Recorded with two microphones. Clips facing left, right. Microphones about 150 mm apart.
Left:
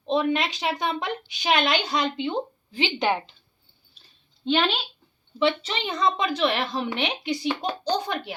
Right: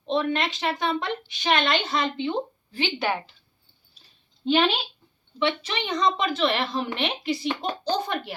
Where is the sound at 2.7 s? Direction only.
15° left (ahead or behind).